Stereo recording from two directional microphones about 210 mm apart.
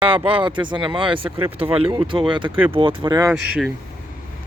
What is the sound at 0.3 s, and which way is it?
Speech, 25° right (ahead or behind).